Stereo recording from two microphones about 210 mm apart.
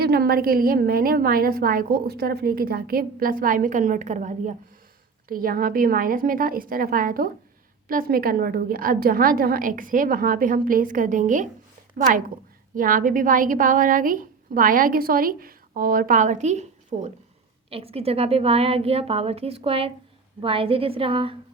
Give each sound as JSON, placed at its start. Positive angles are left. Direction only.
{"t": 0.0, "sound": "a woman's voice", "side_deg": -50}